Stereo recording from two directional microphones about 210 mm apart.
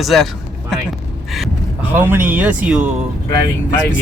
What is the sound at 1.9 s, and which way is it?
Speech, 10° right (ahead or behind).